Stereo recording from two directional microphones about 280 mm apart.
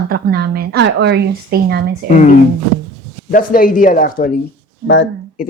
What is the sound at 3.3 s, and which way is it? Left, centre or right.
Speech, left.